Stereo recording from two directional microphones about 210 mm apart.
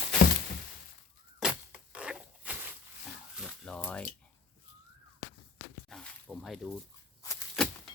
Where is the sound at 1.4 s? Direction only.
5° right (ahead or behind).